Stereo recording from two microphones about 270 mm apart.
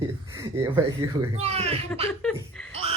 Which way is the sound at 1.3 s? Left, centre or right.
Right.